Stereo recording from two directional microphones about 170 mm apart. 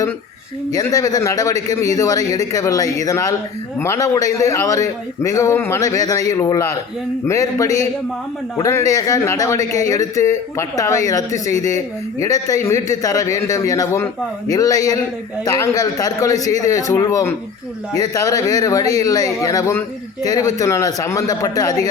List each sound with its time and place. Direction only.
0.8 s a man's voice: 20° left (ahead or behind)